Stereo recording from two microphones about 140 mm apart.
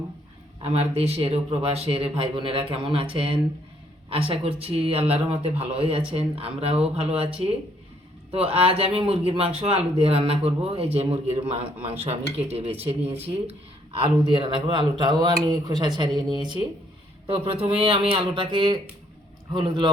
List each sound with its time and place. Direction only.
0.6 s speech: 45° right (ahead or behind)
8.3 s speech: 45° right (ahead or behind)